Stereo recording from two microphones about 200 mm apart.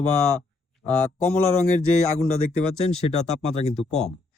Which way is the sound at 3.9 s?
35° left (ahead or behind).